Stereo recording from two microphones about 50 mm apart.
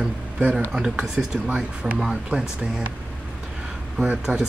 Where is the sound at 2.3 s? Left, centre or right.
Right.